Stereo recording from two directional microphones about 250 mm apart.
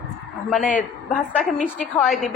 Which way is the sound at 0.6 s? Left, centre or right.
Left.